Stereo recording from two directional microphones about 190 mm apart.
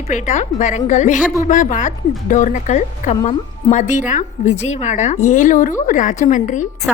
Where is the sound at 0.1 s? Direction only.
40° left (ahead or behind).